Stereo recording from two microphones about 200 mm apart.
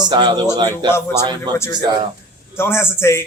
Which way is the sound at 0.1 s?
20° right (ahead or behind).